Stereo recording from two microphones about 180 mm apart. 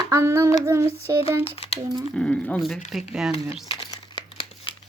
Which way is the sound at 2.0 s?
5° left (ahead or behind).